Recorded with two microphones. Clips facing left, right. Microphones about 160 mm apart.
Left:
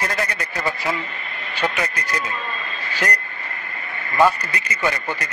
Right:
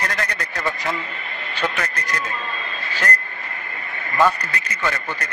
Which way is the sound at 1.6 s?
10° left (ahead or behind).